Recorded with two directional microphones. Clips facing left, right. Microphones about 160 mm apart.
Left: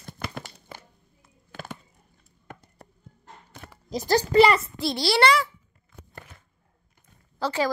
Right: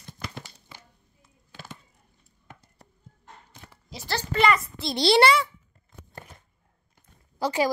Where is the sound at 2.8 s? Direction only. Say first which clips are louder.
Left 5 dB; 55° left (ahead or behind).